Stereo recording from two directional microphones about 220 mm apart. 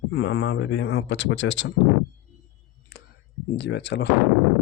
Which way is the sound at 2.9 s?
45° left (ahead or behind).